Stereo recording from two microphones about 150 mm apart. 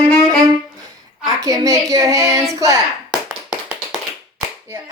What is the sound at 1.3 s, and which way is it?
Child singing, 20° right (ahead or behind).